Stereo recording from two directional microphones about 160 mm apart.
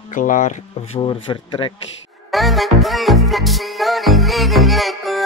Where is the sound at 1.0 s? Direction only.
30° left (ahead or behind).